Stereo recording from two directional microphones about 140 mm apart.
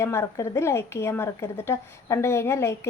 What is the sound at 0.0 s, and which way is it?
A woman's voice, 20° left (ahead or behind).